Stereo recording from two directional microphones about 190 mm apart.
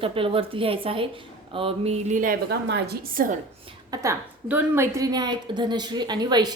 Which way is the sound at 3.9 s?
15° right (ahead or behind).